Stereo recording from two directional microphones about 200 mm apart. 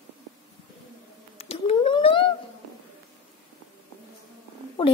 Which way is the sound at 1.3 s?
30° left (ahead or behind).